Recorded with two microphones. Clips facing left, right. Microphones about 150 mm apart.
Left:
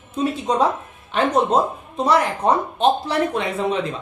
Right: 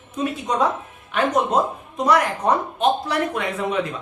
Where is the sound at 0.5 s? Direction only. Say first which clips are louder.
Left 1 dB; 30° left (ahead or behind).